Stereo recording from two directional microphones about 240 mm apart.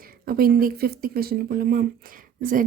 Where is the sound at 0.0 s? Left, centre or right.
Right.